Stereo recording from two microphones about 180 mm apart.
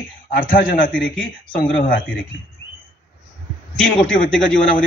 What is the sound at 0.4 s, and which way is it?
Speech, 50° left (ahead or behind).